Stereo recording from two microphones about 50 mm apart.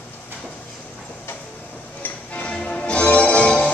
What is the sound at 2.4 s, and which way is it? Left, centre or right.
Music, centre.